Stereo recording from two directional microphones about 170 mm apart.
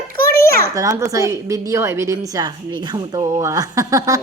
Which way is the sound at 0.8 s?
20° right (ahead or behind).